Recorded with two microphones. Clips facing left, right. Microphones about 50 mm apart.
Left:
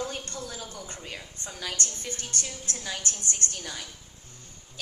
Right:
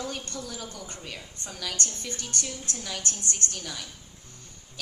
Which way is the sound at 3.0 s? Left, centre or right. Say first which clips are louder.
Even; right.